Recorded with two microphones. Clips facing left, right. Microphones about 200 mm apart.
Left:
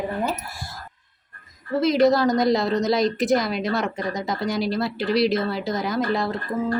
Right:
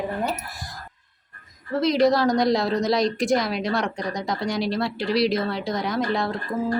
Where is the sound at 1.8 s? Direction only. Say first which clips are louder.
Left 1 dB; centre (ahead or behind).